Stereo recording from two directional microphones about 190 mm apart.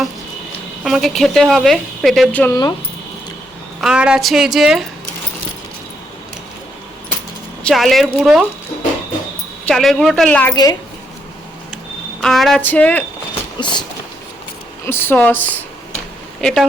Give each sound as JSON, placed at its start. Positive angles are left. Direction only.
{"t": 0.9, "sound": "speech", "side_deg": 0}
{"t": 3.8, "sound": "speech", "side_deg": -5}
{"t": 7.6, "sound": "speech", "side_deg": 0}
{"t": 9.6, "sound": "speech", "side_deg": 5}
{"t": 10.5, "sound": "train", "side_deg": 20}
{"t": 12.2, "sound": "speech", "side_deg": 0}
{"t": 13.6, "sound": "train", "side_deg": 25}
{"t": 14.8, "sound": "speech", "side_deg": 10}